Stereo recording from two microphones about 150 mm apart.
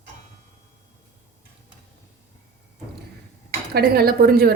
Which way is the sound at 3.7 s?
90° right.